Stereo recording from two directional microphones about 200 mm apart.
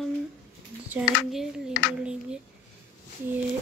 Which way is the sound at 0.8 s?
5° right (ahead or behind).